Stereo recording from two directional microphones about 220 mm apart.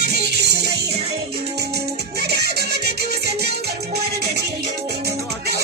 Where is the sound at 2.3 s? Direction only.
45° right (ahead or behind).